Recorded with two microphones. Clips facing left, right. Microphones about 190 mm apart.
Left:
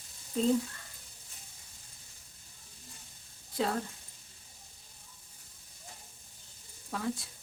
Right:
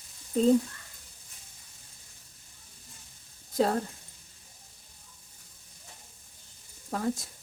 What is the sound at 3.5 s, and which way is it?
Speech, 40° right (ahead or behind).